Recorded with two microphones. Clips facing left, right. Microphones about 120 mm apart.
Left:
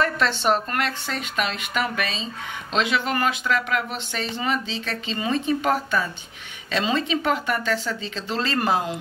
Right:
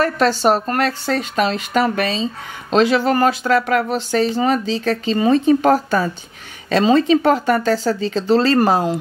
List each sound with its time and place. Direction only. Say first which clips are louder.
0.0 s speech: right 7 dB; 40° right (ahead or behind)